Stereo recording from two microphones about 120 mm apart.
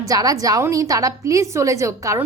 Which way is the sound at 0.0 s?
30° right (ahead or behind).